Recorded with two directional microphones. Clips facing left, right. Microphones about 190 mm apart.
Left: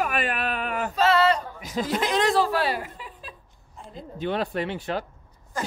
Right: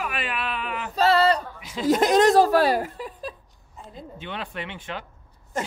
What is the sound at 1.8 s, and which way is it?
A woman's voice, 45° right (ahead or behind).